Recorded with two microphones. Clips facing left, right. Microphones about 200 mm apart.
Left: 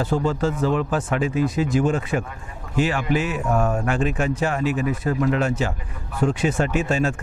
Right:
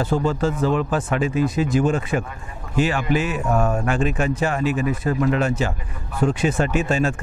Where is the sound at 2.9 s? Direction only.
25° right (ahead or behind).